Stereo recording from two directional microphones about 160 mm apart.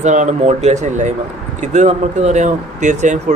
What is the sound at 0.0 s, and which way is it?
Speech, 50° right (ahead or behind).